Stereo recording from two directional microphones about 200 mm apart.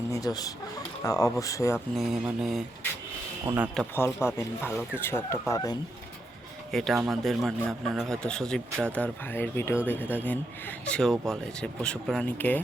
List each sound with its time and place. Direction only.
0.1 s speech: 20° left (ahead or behind)
2.0 s a man's voice: centre (ahead or behind)
3.8 s speech: 10° left (ahead or behind)
6.7 s a man's voice: centre (ahead or behind)